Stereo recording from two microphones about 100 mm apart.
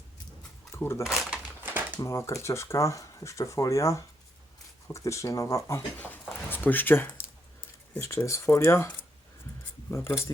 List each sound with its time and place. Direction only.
0.8 s speech: 25° left (ahead or behind)
1.0 s speech: centre (ahead or behind)
1.6 s a sound: 20° right (ahead or behind)
2.0 s speech: 30° left (ahead or behind)
6.0 s speech: 20° left (ahead or behind)